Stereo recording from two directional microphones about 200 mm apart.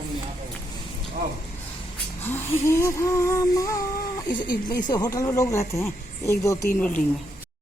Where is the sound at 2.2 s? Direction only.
10° left (ahead or behind).